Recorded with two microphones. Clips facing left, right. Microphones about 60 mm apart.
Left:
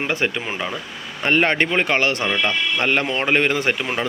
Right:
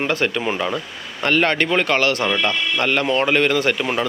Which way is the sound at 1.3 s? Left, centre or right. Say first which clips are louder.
Even; left.